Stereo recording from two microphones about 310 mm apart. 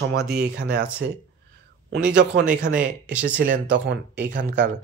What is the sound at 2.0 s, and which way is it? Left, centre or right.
Speech, right.